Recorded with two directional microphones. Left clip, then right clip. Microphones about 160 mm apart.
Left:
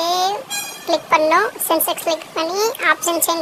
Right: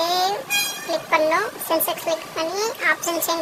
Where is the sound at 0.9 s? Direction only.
40° left (ahead or behind).